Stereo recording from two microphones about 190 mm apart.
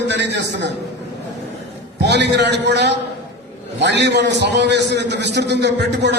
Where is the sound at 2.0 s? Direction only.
65° right (ahead or behind).